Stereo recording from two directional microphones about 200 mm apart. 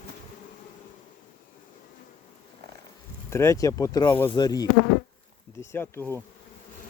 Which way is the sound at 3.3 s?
15° left (ahead or behind).